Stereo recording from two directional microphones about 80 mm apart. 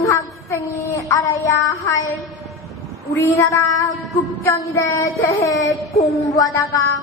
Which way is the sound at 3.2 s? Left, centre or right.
Left.